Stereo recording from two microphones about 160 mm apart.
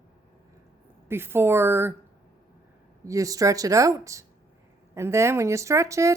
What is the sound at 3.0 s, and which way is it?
A woman's voice, 20° right (ahead or behind).